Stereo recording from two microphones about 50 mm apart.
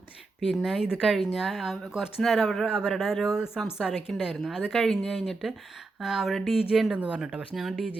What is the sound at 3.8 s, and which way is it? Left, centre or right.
Speech, centre.